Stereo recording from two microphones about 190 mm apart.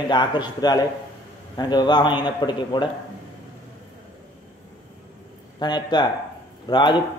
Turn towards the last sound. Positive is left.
turn(degrees=25)  # may be behind; listen again after turning